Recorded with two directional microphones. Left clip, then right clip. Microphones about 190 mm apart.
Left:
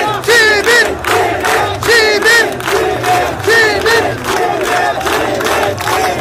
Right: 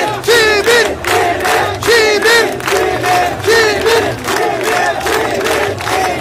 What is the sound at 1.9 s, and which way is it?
Music, 15° right (ahead or behind).